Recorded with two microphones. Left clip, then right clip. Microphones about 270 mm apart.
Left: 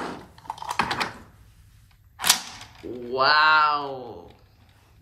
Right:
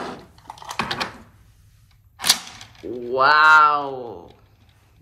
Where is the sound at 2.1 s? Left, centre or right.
Centre.